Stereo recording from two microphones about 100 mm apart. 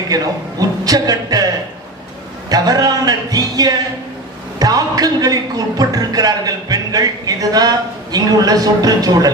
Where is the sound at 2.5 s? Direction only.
40° right (ahead or behind).